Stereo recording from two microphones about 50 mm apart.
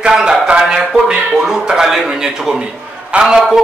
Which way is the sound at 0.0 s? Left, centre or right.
Centre.